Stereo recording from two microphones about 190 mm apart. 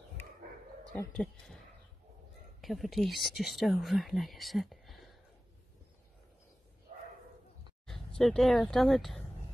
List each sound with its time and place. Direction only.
0.9 s speech: 5° left (ahead or behind)
2.6 s speech: centre (ahead or behind)
6.9 s bow-wow: 35° right (ahead or behind)
7.8 s speech: centre (ahead or behind)